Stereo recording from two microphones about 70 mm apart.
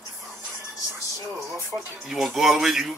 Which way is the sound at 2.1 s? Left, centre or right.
Centre.